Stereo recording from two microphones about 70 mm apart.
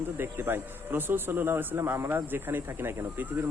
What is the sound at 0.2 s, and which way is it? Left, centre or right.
Speech, right.